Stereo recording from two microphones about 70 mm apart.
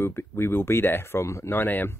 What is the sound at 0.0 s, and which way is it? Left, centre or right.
Speech, left.